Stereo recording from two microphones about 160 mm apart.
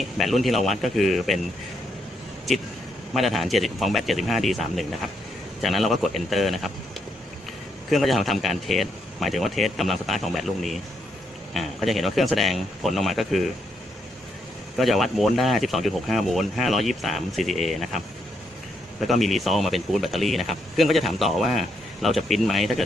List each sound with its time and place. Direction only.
0.2 s speech: centre (ahead or behind)
3.1 s speech: centre (ahead or behind)
7.9 s speech: centre (ahead or behind)
14.8 s speech: centre (ahead or behind)